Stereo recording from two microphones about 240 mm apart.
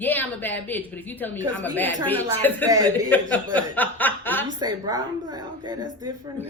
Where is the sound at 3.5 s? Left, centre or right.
Centre.